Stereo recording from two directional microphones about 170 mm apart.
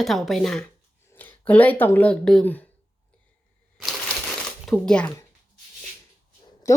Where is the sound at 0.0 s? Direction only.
Centre (ahead or behind).